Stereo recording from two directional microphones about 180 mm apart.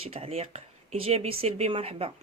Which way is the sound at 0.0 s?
35° right (ahead or behind).